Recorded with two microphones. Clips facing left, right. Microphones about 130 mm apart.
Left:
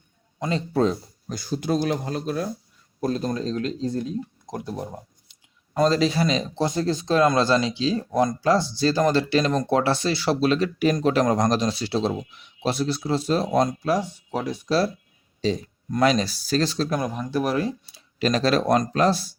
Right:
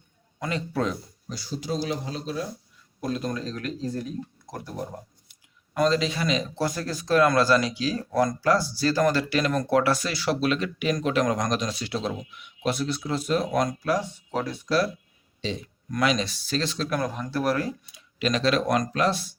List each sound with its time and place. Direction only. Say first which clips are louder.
0.3 s speech: left 5 dB; 25° left (ahead or behind)
1.3 s speech: left 6 dB; 50° left (ahead or behind)
3.0 s speech: left 4 dB; 35° left (ahead or behind)
4.5 s a sound: left 3 dB; 20° left (ahead or behind)
5.9 s speech: left 4 dB; 35° left (ahead or behind); by 14.7 s 15° left (ahead or behind)
15.4 s speech: left 7 dB; 40° left (ahead or behind)
16.9 s speech: left 2 dB; 15° left (ahead or behind)
17.8 s speech: left 3 dB; 35° left (ahead or behind)